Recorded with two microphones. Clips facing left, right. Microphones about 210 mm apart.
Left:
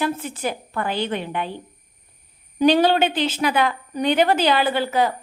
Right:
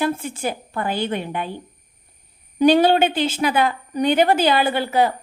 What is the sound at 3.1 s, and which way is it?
Speech, 45° right (ahead or behind).